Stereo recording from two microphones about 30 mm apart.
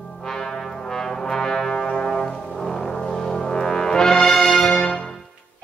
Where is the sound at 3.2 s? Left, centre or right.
Left.